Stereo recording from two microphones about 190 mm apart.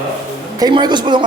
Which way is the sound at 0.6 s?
20° right (ahead or behind).